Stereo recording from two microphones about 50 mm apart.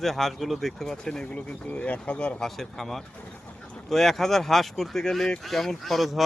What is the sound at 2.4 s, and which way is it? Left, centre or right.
Goose, centre.